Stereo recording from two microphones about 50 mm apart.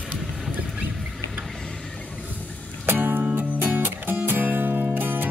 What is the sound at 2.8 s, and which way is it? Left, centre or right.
Music, right.